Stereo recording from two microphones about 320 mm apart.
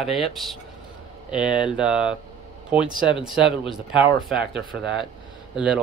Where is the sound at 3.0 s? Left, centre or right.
Centre.